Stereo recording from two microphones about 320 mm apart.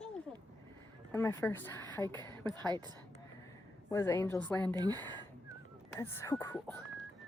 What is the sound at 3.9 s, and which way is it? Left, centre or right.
Speech, centre.